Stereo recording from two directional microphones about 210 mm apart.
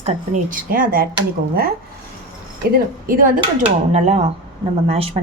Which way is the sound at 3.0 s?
45° right (ahead or behind).